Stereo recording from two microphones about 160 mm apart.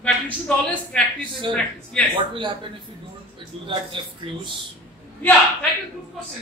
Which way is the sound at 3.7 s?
30° right (ahead or behind).